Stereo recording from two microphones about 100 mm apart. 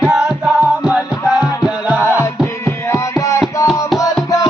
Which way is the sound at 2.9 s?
30° left (ahead or behind).